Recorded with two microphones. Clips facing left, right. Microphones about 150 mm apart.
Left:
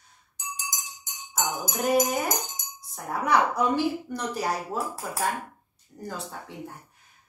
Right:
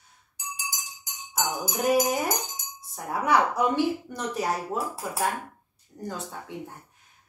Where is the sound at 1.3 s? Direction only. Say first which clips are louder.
Even; 10° right (ahead or behind).